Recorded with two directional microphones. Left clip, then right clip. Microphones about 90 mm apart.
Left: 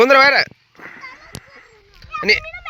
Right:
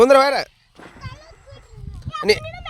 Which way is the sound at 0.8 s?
20° right (ahead or behind).